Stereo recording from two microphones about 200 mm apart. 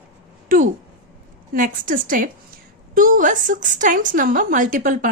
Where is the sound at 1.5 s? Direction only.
45° right (ahead or behind).